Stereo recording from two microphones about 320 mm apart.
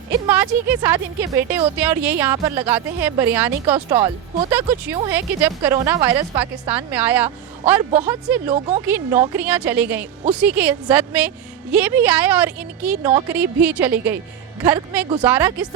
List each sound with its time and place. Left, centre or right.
0.1 s speech: centre
5.1 s a woman's voice: centre
8.5 s speech: right
8.8 s a woman's voice: centre